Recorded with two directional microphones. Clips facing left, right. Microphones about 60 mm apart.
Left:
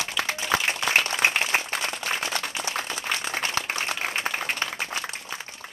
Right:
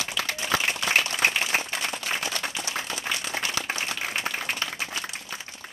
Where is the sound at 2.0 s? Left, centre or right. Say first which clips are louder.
Left 1 dB; left.